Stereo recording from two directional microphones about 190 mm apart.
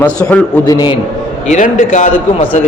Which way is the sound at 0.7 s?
20° left (ahead or behind).